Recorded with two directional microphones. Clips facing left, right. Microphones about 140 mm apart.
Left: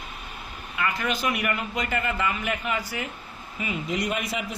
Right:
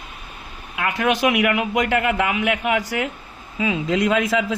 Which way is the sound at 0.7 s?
70° right (ahead or behind).